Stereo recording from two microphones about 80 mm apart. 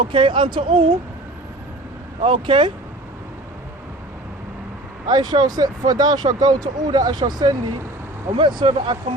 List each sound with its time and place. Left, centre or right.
0.0 s speech: right
2.2 s speech: right
5.0 s speech: right
8.4 s speech: right